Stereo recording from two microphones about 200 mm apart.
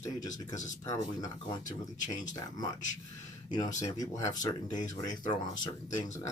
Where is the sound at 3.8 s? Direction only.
15° left (ahead or behind).